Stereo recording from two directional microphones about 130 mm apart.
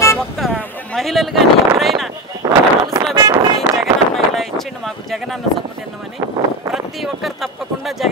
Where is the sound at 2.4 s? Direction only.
25° right (ahead or behind).